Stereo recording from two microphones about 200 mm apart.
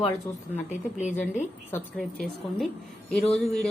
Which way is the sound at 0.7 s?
35° left (ahead or behind).